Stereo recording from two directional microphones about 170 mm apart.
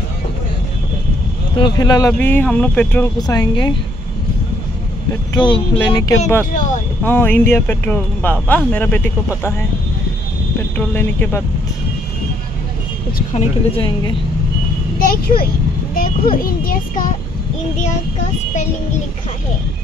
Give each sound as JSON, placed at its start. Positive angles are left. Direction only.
{"t": 1.6, "sound": "speech", "side_deg": 25}
{"t": 3.2, "sound": "speech", "side_deg": 25}
{"t": 5.3, "sound": "speech", "side_deg": 25}
{"t": 10.8, "sound": "speech", "side_deg": 10}
{"t": 13.3, "sound": "a woman's voice", "side_deg": 35}
{"t": 15.0, "sound": "a child's voice", "side_deg": 60}